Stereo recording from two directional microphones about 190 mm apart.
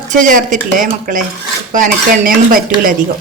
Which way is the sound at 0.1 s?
45° right (ahead or behind).